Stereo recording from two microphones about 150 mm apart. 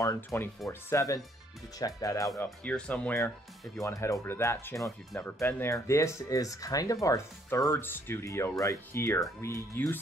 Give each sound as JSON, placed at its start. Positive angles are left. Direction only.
{"t": 0.0, "sound": "speech", "side_deg": 20}
{"t": 2.6, "sound": "speech", "side_deg": 5}
{"t": 3.8, "sound": "speech", "side_deg": 20}